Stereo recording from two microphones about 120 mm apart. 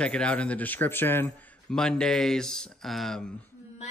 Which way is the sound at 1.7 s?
5° left (ahead or behind).